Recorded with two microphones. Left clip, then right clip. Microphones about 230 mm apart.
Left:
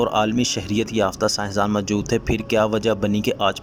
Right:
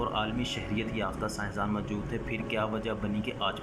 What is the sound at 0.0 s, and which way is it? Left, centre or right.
Speech, left.